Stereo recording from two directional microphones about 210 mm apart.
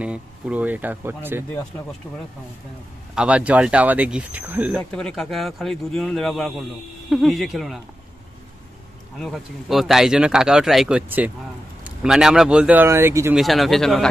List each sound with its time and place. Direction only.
0.0 s speech: 5° right (ahead or behind)
2.0 s speech: 5° left (ahead or behind)
3.2 s speech: 5° right (ahead or behind)
9.2 s speech: centre (ahead or behind)
13.4 s speech: centre (ahead or behind)